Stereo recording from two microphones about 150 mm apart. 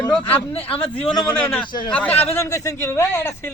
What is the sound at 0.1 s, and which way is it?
Speech, 10° left (ahead or behind).